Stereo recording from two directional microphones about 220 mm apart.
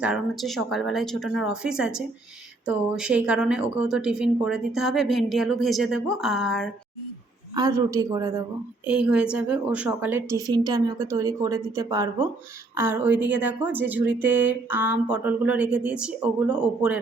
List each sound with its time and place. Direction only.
0.0 s speech: centre (ahead or behind)
7.5 s a woman's voice: 15° right (ahead or behind)